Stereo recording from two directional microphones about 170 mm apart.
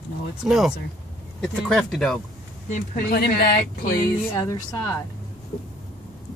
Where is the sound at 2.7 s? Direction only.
60° left (ahead or behind).